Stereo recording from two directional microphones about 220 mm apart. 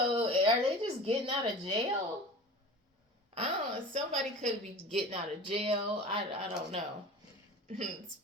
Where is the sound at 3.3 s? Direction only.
30° right (ahead or behind).